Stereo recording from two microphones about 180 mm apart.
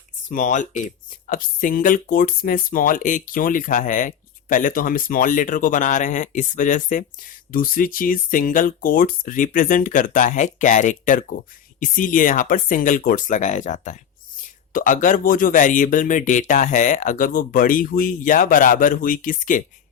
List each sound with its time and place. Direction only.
0.3 s speech: 45° left (ahead or behind)